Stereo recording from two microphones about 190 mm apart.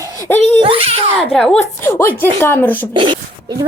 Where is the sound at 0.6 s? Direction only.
30° right (ahead or behind).